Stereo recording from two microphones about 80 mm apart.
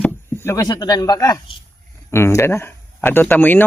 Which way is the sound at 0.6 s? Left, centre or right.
Left.